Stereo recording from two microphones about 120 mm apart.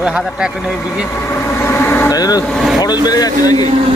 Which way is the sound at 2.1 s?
30° left (ahead or behind).